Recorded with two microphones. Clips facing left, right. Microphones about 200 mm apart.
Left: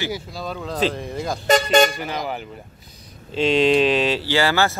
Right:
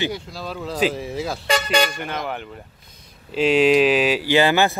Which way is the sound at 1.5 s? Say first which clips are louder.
Left 5 dB; 45° left (ahead or behind).